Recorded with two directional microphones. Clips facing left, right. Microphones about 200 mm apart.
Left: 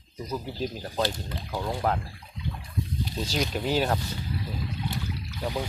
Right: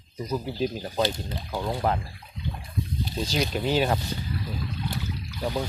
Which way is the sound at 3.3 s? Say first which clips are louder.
Right 2 dB; centre (ahead or behind).